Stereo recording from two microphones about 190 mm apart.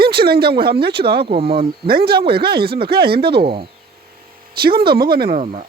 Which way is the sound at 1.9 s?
55° right (ahead or behind).